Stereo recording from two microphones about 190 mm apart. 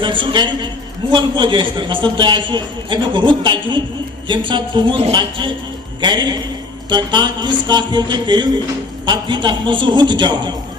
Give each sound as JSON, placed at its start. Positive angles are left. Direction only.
{"t": 0.0, "sound": "a man's voice", "side_deg": -25}